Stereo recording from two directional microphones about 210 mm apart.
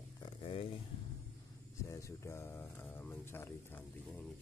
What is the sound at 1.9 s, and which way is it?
Speech, 15° left (ahead or behind).